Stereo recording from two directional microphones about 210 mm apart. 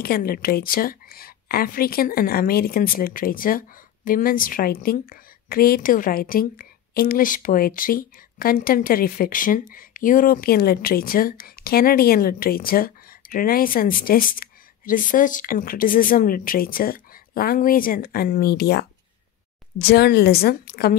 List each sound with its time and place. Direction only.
0.0 s a woman's voice: 45° left (ahead or behind)
19.9 s a woman's voice: 50° left (ahead or behind)